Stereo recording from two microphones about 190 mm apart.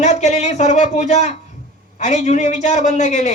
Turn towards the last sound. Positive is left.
turn(degrees=40)  # may be behind; listen again after turning